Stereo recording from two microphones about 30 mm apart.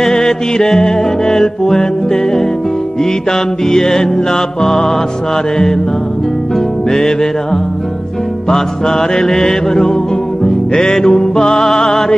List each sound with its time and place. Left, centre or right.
0.0 s mantra: centre
3.0 s mantra: centre
6.9 s mantra: centre
8.5 s mantra: centre
10.4 s music: centre